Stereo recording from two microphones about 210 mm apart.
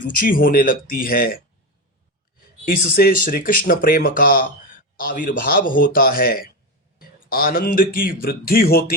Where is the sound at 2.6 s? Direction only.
45° left (ahead or behind).